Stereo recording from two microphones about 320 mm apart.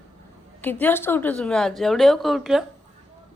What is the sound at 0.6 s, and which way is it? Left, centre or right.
Speech, centre.